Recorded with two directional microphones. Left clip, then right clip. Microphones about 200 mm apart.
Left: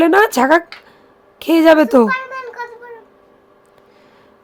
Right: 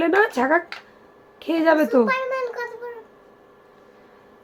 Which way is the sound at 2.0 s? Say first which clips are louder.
Left 2 dB; 20° right (ahead or behind).